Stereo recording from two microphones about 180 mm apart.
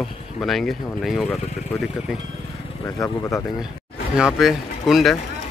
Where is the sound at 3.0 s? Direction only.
15° left (ahead or behind).